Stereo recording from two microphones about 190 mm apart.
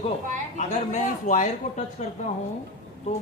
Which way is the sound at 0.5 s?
40° left (ahead or behind).